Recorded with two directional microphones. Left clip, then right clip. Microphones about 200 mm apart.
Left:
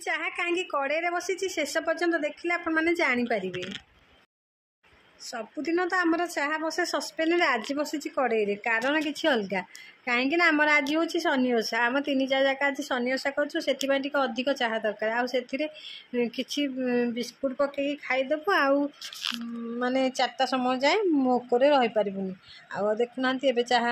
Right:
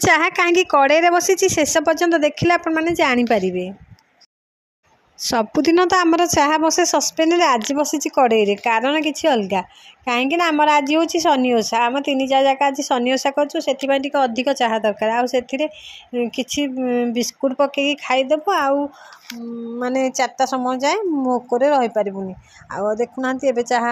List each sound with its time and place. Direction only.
0.0 s a woman's voice: 45° right (ahead or behind)
2.7 s a woman's voice: 25° right (ahead or behind)
5.2 s a woman's voice: 35° right (ahead or behind)
19.8 s speech: 20° right (ahead or behind)